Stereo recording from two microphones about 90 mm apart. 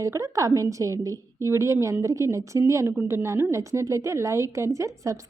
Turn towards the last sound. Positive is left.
turn(degrees=-35)  # may be behind; listen again after turning